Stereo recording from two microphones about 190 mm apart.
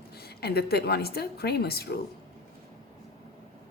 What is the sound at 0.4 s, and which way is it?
A woman's voice, 55° left (ahead or behind).